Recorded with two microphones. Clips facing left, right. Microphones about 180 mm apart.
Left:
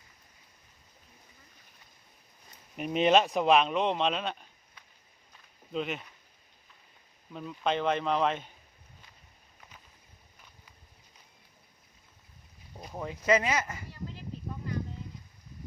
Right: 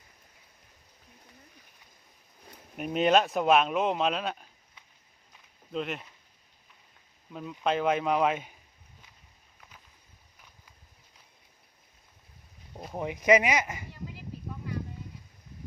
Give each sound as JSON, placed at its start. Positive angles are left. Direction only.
{"t": 2.7, "sound": "speech", "side_deg": 0}
{"t": 5.7, "sound": "speech", "side_deg": 0}
{"t": 7.3, "sound": "speech", "side_deg": -5}
{"t": 12.9, "sound": "speech", "side_deg": -20}